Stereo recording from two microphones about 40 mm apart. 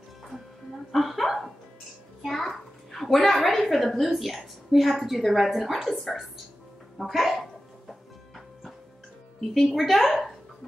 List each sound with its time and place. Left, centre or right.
0.9 s hiccup: centre
2.2 s a sound: centre
3.5 s a woman's voice: centre
9.5 s a woman's voice: centre